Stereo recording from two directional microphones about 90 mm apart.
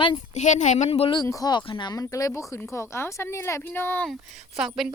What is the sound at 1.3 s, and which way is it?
Speech, 40° left (ahead or behind).